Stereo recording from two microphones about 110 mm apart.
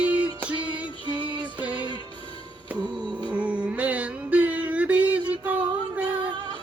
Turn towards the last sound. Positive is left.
turn(degrees=-15)  # may be behind; listen again after turning